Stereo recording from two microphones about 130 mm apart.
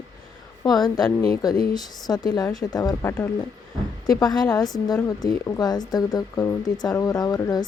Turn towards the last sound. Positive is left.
turn(degrees=30)  # may be behind; listen again after turning